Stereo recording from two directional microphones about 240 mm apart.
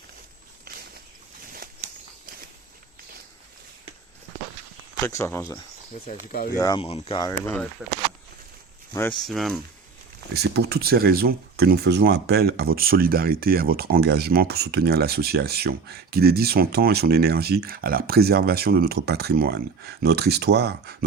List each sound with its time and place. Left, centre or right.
0.7 s a sound: right
5.0 s speech: centre
6.6 s speech: centre
7.4 s speech: centre
8.9 s speech: centre
9.1 s speech: centre
10.3 s speech: right